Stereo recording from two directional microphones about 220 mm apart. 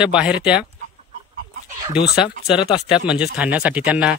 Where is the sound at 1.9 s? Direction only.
5° right (ahead or behind).